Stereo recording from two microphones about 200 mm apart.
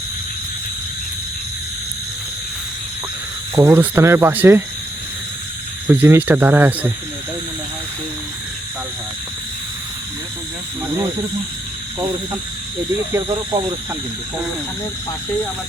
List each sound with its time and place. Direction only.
3.5 s speech: 10° right (ahead or behind)
5.9 s speech: 10° right (ahead or behind)
13.1 s speech: 20° right (ahead or behind)